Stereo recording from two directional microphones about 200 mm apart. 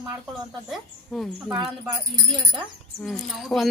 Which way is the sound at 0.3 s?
Centre (ahead or behind).